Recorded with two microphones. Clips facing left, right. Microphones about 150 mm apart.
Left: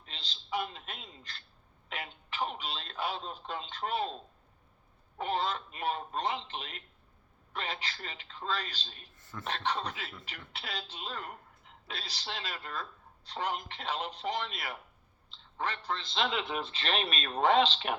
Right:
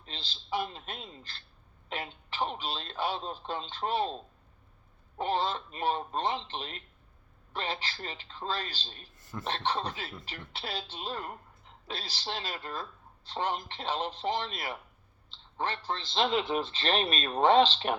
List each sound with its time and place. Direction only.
0.0 s a man's voice: 30° right (ahead or behind)